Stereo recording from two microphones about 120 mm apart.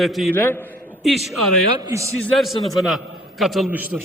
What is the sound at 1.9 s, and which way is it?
Speech, 25° right (ahead or behind).